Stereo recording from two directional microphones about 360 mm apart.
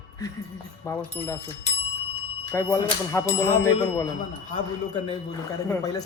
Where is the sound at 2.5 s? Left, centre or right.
Centre.